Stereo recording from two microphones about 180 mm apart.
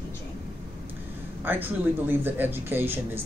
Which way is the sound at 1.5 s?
10° right (ahead or behind).